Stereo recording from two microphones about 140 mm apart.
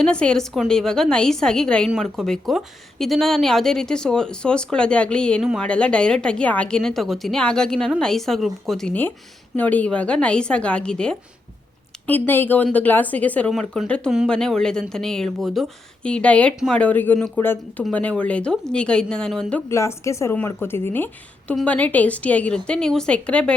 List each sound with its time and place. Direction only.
0.0 s a woman's voice: 5° left (ahead or behind)
19.7 s a woman's voice: 20° left (ahead or behind)